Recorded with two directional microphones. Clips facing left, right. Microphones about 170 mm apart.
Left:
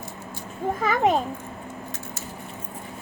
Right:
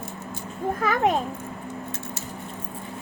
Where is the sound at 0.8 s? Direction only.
Centre (ahead or behind).